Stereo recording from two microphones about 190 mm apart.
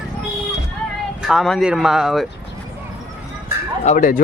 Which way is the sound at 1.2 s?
Centre (ahead or behind).